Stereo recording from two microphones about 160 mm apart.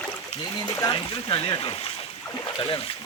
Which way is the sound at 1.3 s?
35° left (ahead or behind).